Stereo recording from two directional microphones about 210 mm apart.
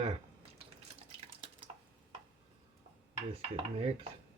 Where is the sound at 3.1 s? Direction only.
25° right (ahead or behind).